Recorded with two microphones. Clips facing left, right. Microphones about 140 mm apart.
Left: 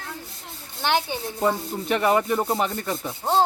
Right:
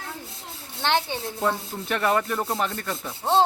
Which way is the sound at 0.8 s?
5° left (ahead or behind).